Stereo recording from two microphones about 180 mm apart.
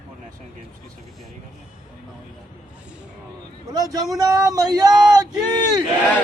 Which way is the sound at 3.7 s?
20° right (ahead or behind).